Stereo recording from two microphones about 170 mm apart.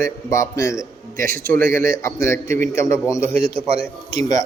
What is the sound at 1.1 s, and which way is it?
Speech, 55° right (ahead or behind).